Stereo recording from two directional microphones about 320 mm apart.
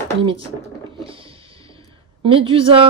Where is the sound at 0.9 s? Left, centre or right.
Centre.